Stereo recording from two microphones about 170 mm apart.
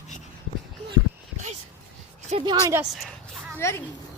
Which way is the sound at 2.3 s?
40° right (ahead or behind).